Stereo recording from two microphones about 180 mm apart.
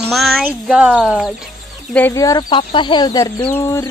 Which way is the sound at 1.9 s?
15° left (ahead or behind).